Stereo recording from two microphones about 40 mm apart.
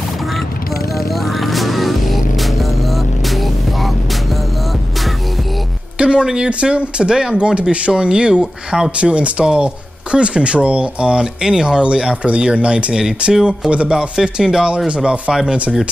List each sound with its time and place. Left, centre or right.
1.2 s music: centre
5.9 s speech: right
14.2 s speech: centre